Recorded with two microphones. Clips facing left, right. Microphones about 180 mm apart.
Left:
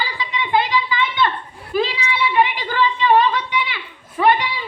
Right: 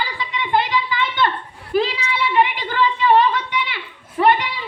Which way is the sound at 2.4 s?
55° right (ahead or behind).